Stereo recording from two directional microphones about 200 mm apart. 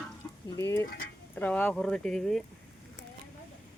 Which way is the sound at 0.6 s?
15° left (ahead or behind).